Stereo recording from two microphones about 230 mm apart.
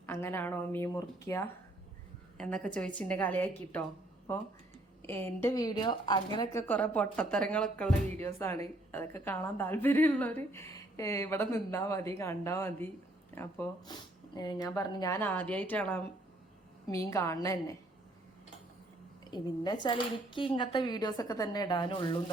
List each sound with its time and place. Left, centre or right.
0.0 s a woman's voice: centre
5.0 s a woman's voice: centre
19.3 s a woman's voice: centre